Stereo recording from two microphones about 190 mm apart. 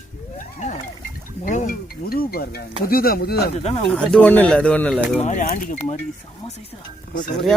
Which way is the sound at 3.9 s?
5° left (ahead or behind).